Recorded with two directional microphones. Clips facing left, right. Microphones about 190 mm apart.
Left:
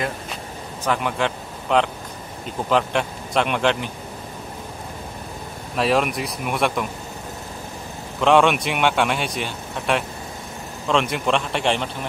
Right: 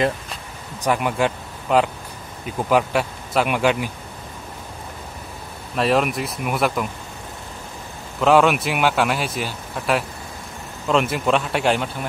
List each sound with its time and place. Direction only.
0.8 s speech: 10° right (ahead or behind)
5.8 s speech: centre (ahead or behind)
8.2 s speech: 5° right (ahead or behind)